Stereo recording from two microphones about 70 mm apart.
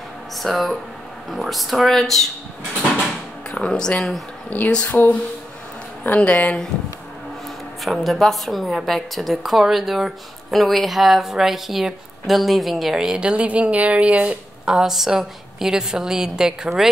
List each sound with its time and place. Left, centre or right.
0.4 s a woman's voice: centre
3.5 s speech: centre
4.9 s a woman's voice: left
7.8 s a woman's voice: centre
14.7 s a woman's voice: centre